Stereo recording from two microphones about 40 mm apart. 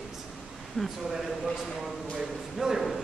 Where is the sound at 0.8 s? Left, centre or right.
Centre.